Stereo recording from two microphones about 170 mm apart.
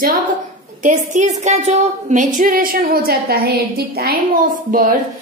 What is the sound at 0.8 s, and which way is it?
A woman's voice, 45° right (ahead or behind).